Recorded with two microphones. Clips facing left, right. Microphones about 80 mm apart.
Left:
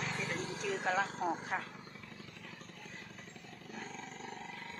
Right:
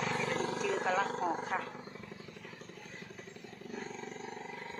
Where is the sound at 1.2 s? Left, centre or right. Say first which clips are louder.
Right 2 dB; centre.